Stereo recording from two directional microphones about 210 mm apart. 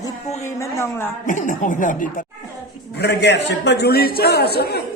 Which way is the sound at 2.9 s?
50° left (ahead or behind).